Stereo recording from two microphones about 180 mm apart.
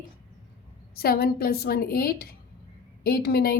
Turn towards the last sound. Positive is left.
turn(degrees=60)  # may be behind; listen again after turning